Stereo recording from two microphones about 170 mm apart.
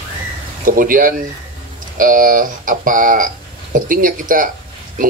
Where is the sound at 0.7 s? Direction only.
55° right (ahead or behind).